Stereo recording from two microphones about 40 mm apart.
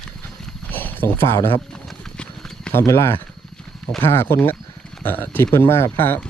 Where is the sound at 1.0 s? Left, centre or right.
Left.